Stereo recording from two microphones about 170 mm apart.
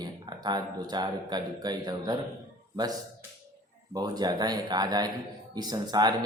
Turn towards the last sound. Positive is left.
turn(degrees=-25)  # may be behind; listen again after turning